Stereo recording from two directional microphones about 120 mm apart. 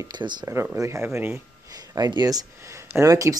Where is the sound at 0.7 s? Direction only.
25° right (ahead or behind).